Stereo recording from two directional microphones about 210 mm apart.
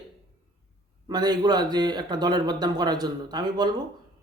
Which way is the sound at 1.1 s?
20° right (ahead or behind).